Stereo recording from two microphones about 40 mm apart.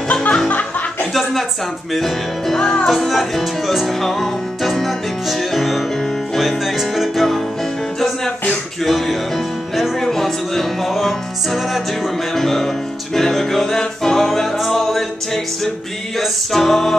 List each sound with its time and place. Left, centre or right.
0.1 s music: left
0.5 s music: left
2.0 s music: centre
2.6 s music: centre
2.9 s speech: centre
3.8 s music: centre
8.8 s music: centre
16.2 s speech: centre